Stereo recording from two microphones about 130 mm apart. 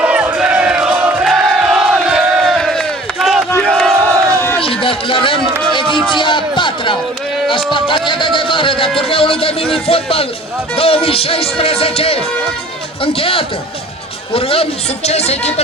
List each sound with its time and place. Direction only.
0.0 s crowd: 10° right (ahead or behind)
0.3 s battle cry: 10° right (ahead or behind)
3.7 s crowd: 5° left (ahead or behind)
4.0 s crowd: 15° left (ahead or behind)
4.6 s a sound: 45° left (ahead or behind)
7.5 s speech: 40° left (ahead or behind)
9.0 s music: 45° left (ahead or behind)
14.3 s a man's voice: 45° left (ahead or behind)